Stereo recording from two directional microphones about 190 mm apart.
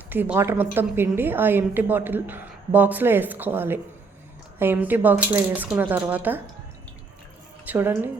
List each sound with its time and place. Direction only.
0.1 s a woman's voice: 10° right (ahead or behind)
7.6 s a woman's voice: 10° right (ahead or behind)